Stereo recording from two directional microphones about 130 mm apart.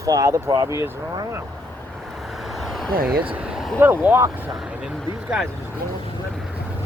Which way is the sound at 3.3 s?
5° right (ahead or behind).